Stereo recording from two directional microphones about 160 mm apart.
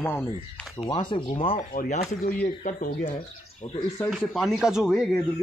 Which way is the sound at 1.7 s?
55° left (ahead or behind).